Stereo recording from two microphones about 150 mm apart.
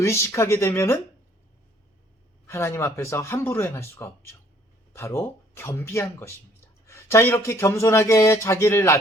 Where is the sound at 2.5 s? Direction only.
15° left (ahead or behind).